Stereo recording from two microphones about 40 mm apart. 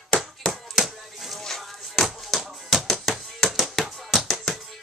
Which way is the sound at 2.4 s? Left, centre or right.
Centre.